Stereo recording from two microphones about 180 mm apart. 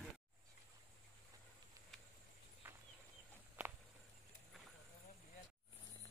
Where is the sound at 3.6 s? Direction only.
10° right (ahead or behind).